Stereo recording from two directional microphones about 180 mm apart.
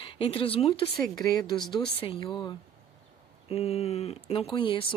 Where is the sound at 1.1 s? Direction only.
20° left (ahead or behind).